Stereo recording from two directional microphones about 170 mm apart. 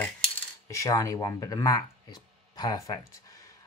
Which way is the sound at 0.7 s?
20° left (ahead or behind).